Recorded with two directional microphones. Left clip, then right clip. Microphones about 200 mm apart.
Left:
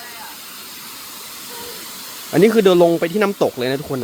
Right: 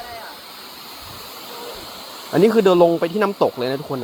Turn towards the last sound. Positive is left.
turn(degrees=20)  # may be behind; listen again after turning